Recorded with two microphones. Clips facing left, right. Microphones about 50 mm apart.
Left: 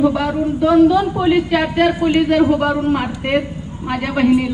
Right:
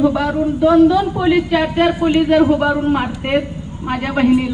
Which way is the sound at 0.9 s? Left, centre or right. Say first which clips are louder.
Even; centre.